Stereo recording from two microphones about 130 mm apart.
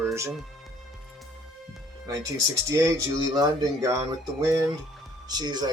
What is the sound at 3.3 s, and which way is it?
Speech, 25° right (ahead or behind).